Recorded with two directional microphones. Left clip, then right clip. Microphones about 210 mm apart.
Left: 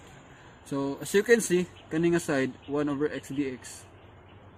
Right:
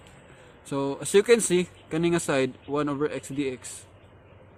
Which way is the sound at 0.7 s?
35° right (ahead or behind).